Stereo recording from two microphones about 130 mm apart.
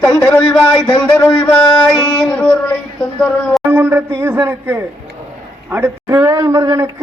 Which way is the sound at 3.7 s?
15° right (ahead or behind).